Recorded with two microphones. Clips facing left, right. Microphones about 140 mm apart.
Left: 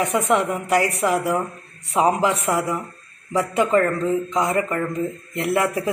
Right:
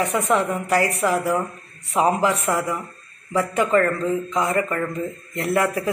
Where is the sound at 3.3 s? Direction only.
20° left (ahead or behind).